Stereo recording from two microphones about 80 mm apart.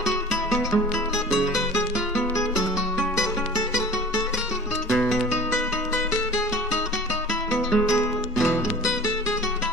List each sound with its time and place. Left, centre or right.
1.3 s music: centre
1.8 s music: left
7.5 s music: centre